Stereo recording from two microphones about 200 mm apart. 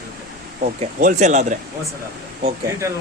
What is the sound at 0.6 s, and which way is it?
Speech, 40° right (ahead or behind).